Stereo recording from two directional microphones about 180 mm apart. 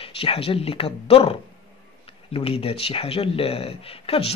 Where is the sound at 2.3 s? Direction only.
30° left (ahead or behind).